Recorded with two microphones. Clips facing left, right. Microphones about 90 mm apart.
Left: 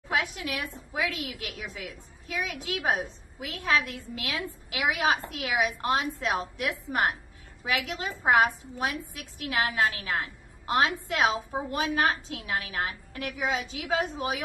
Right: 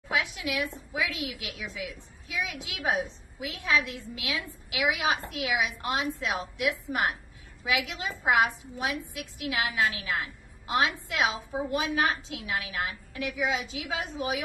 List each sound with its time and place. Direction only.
0.1 s a woman's voice: 40° left (ahead or behind)